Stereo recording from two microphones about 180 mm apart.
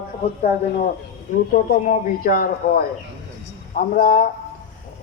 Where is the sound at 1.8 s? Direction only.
50° left (ahead or behind).